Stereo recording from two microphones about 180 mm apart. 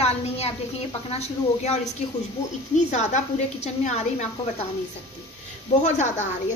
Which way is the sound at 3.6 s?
40° left (ahead or behind).